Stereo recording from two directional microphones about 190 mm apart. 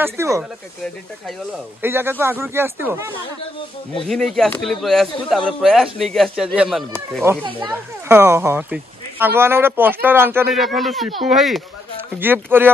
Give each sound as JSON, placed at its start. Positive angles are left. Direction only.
{"t": 0.0, "sound": "speech", "side_deg": -10}
{"t": 1.8, "sound": "speech", "side_deg": -10}
{"t": 4.1, "sound": "speech", "side_deg": 0}
{"t": 10.5, "sound": "speech", "side_deg": 0}